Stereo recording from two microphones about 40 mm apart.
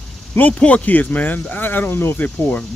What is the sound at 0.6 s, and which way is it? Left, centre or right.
Speech, left.